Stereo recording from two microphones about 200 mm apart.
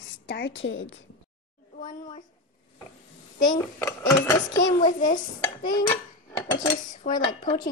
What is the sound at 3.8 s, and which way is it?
Speech, 15° left (ahead or behind).